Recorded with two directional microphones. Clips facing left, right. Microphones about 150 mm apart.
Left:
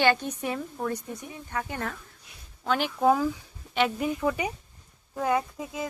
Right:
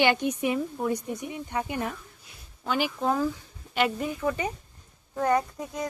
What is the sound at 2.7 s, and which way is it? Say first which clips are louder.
Speech: even; 5° right (ahead or behind).